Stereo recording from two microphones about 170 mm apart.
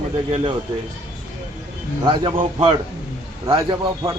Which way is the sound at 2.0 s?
30° right (ahead or behind).